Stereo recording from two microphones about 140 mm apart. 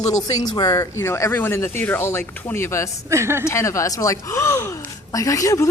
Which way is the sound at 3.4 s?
20° left (ahead or behind).